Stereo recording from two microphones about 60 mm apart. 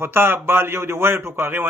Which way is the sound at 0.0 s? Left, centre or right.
Right.